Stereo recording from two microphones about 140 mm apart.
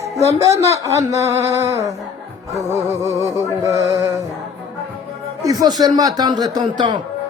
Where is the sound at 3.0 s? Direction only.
20° right (ahead or behind).